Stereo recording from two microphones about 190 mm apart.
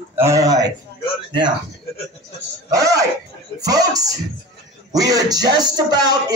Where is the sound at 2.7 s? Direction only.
20° right (ahead or behind).